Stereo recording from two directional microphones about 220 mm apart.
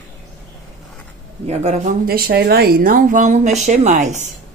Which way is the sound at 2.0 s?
45° right (ahead or behind).